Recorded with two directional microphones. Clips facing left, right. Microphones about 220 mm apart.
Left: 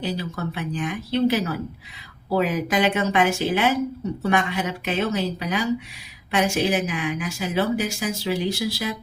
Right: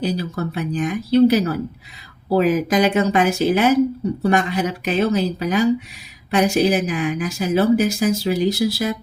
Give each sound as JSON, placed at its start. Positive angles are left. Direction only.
{"t": 0.0, "sound": "a woman's voice", "side_deg": -40}